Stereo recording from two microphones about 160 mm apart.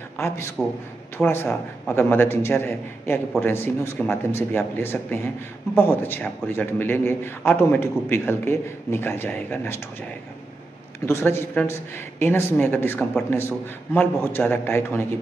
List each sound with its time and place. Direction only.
0.6 s speech: centre (ahead or behind)
1.1 s a man's voice: 15° left (ahead or behind)
11.1 s a man's voice: 15° left (ahead or behind)